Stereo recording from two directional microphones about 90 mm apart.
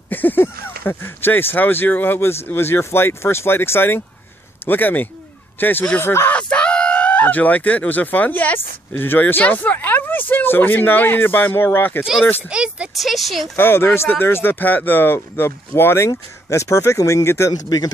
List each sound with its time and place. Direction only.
0.1 s speech: 20° left (ahead or behind)
6.3 s speech: 10° left (ahead or behind)
12.4 s speech: 10° right (ahead or behind)
12.9 s speech: centre (ahead or behind)
13.6 s speech: 25° left (ahead or behind)
17.6 s speech: 50° left (ahead or behind)